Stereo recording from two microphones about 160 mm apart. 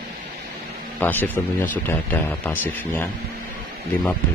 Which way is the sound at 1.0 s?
10° left (ahead or behind).